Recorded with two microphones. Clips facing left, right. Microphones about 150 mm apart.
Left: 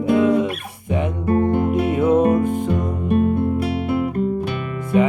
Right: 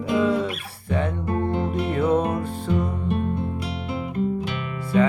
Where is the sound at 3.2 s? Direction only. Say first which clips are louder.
Left 8 dB; 60° left (ahead or behind).